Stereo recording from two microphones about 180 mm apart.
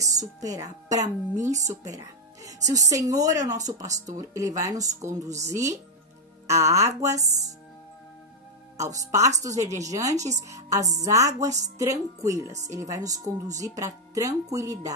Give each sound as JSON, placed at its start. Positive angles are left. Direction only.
{"t": 0.0, "sound": "a woman's voice", "side_deg": -20}
{"t": 8.7, "sound": "a woman's voice", "side_deg": -15}